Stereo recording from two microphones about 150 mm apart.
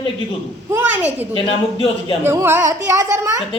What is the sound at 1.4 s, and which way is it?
Speech, 35° left (ahead or behind).